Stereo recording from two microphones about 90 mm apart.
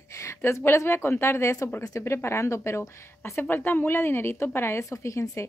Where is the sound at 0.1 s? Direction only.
35° left (ahead or behind).